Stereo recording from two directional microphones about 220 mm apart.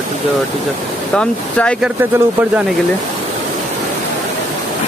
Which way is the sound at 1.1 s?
5° left (ahead or behind).